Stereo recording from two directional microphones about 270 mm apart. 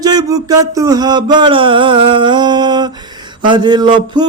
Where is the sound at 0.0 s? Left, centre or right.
Centre.